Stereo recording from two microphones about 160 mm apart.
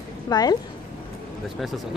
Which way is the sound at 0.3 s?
25° left (ahead or behind).